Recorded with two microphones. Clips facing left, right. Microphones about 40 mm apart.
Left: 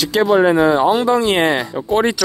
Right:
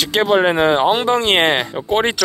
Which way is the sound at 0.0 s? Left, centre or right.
Right.